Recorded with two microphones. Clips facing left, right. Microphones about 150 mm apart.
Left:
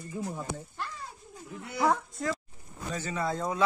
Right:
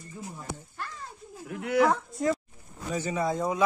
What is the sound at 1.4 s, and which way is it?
Speech, 80° right.